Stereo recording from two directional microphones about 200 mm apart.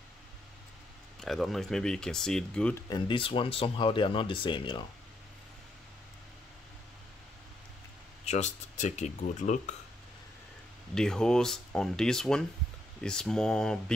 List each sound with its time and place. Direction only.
1.2 s speech: centre (ahead or behind)
2.9 s speech: 25° left (ahead or behind)
8.3 s speech: 35° left (ahead or behind)
11.0 s speech: 5° left (ahead or behind)